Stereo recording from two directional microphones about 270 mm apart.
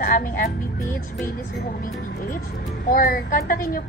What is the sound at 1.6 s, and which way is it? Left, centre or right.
Speech, left.